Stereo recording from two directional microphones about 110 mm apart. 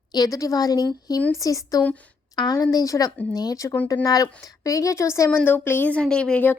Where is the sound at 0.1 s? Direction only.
35° left (ahead or behind).